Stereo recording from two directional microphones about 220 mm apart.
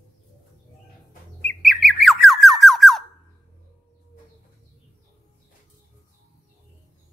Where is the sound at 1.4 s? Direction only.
Centre (ahead or behind).